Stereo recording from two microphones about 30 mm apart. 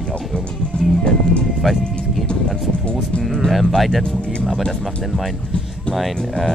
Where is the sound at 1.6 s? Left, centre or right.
Centre.